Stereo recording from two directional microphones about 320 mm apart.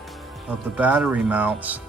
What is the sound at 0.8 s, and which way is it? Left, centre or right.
Speech, centre.